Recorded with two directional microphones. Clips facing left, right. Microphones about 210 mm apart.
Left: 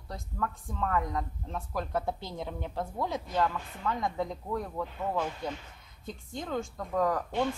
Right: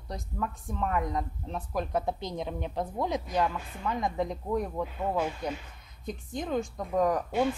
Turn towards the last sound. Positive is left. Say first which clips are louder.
# right 2 dB
turn(degrees=-15)  # may be behind; listen again after turning